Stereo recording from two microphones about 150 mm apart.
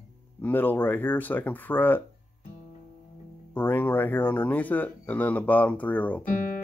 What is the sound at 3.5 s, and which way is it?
Speech, 15° left (ahead or behind).